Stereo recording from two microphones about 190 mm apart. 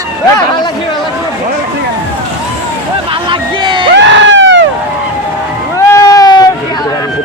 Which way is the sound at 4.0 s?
70° right (ahead or behind).